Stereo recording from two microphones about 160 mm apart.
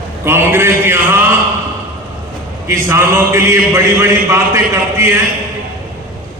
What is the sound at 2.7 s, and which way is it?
A man's voice, 15° right (ahead or behind).